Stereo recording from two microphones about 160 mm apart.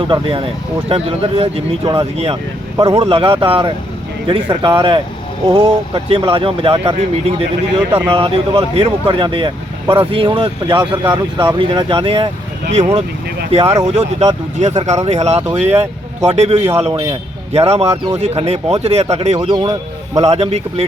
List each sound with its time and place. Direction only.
0.1 s speech: 35° right (ahead or behind)
2.7 s speech: 25° right (ahead or behind)
3.0 s speech: 35° right (ahead or behind)
13.5 s speech: 40° right (ahead or behind)
15.4 s speech: 15° right (ahead or behind)
15.8 s speech: 40° right (ahead or behind)
17.8 s speech: 20° right (ahead or behind)
18.2 s speech: 40° right (ahead or behind)
19.4 s speech: 25° right (ahead or behind)
20.2 s speech: 40° right (ahead or behind)